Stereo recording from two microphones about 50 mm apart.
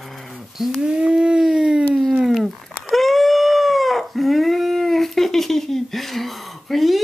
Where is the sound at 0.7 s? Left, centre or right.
Centre.